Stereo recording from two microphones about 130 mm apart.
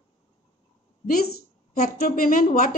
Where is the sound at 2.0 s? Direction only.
90° left.